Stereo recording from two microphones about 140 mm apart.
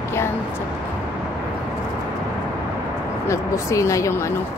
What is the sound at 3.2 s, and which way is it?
Speech, 20° left (ahead or behind).